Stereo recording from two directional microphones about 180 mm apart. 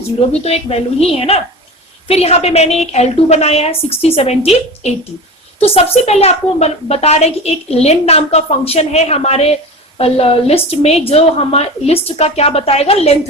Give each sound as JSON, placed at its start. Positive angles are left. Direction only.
{"t": 0.3, "sound": "a woman's voice", "side_deg": 35}